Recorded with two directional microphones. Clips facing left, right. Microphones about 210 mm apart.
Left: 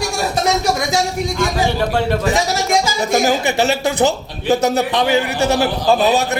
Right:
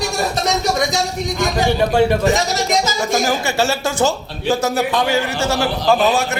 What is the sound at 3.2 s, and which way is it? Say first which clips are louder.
Speech: left 2 dB; 20° left (ahead or behind).